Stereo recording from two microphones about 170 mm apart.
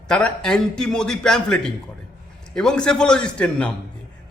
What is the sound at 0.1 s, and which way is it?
A man's voice, 5° left (ahead or behind).